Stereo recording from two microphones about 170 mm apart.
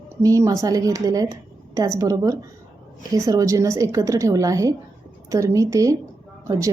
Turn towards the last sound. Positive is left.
turn(degrees=-20)  # may be behind; listen again after turning